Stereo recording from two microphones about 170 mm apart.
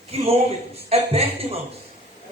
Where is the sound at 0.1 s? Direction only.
35° right (ahead or behind).